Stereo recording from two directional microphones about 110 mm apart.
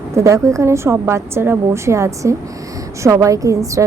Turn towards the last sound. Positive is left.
turn(degrees=-30)  # may be behind; listen again after turning